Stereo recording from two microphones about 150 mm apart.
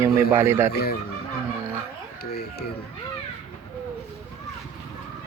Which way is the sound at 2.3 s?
90° left.